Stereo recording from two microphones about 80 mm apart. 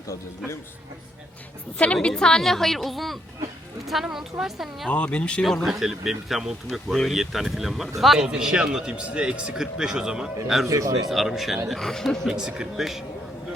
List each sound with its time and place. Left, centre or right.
0.1 s speech: left
1.8 s a woman's voice: centre
4.9 s speech: centre
10.7 s a man's voice: right
11.1 s a woman's voice: centre